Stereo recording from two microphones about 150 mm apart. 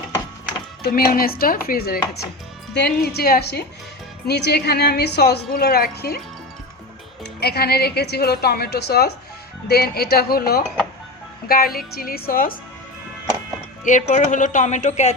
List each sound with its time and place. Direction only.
0.8 s a woman's voice: 90° left
7.3 s a woman's voice: 90° left; by 12.5 s 75° left (ahead or behind)
13.8 s speech: 55° left (ahead or behind)